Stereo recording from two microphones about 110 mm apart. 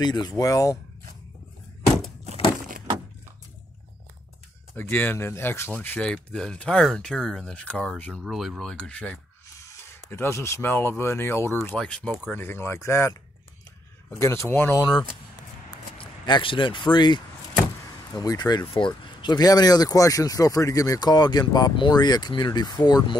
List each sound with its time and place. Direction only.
0.0 s speech: 40° left (ahead or behind)
4.7 s speech: 15° left (ahead or behind)
8.2 s speech: centre (ahead or behind)
9.7 s a sound: 25° left (ahead or behind)
10.1 s speech: 25° left (ahead or behind)
11.8 s speech: 5° left (ahead or behind)
12.4 s speech: 20° left (ahead or behind)
16.0 s speech: 50° left (ahead or behind)
18.7 s speech: 50° left (ahead or behind)